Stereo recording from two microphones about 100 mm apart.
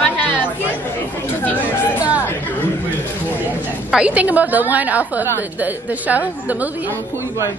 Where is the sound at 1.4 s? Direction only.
15° left (ahead or behind).